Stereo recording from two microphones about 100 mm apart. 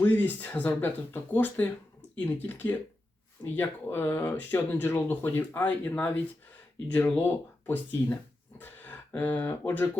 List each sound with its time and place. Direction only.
0.0 s speech: 20° left (ahead or behind)